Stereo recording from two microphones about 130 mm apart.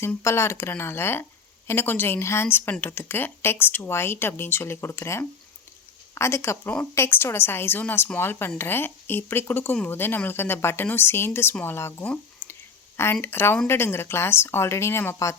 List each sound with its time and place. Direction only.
0.0 s speech: 20° left (ahead or behind)